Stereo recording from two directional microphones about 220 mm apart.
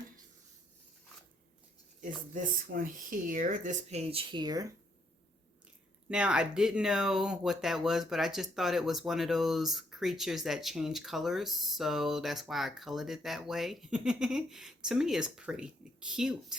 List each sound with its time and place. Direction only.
2.0 s speech: 35° right (ahead or behind); by 4.7 s 15° right (ahead or behind)
6.1 s speech: 5° right (ahead or behind)